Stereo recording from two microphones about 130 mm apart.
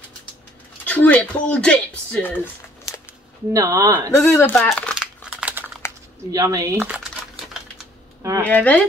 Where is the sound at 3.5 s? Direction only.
25° right (ahead or behind).